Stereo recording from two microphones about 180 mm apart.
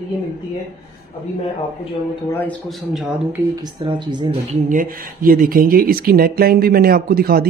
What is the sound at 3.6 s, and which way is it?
Speech, 25° right (ahead or behind).